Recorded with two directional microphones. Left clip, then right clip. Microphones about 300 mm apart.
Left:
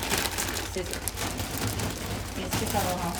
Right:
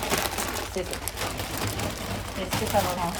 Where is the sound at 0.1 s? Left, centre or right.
Centre.